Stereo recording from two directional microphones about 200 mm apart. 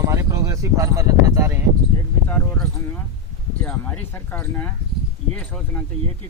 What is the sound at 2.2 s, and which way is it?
Speech, 10° left (ahead or behind).